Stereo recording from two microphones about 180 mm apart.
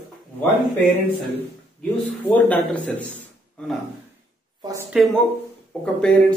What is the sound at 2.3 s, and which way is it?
Speech, 10° left (ahead or behind).